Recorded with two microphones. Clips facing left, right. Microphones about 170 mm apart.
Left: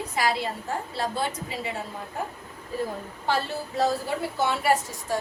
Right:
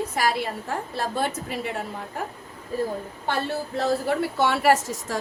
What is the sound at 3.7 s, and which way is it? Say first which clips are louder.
A woman's voice: right 2 dB; 70° right (ahead or behind).